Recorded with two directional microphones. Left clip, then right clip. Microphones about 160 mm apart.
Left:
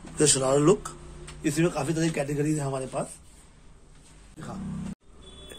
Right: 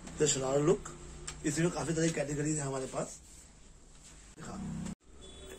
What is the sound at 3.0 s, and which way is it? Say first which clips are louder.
Speech: left 6 dB; 65° left (ahead or behind).